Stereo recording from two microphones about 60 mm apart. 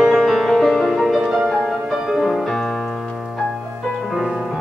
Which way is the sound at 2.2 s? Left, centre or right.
Centre.